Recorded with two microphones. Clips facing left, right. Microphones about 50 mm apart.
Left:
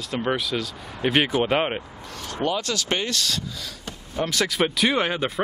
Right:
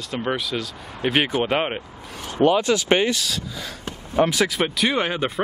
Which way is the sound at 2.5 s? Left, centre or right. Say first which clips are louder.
Right 7 dB; centre.